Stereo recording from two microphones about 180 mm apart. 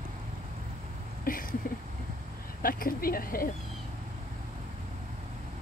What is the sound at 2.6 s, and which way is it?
Speech, 55° left (ahead or behind).